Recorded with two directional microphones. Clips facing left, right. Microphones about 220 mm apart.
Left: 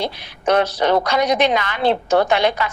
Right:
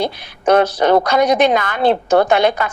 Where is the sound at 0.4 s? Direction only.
50° right (ahead or behind).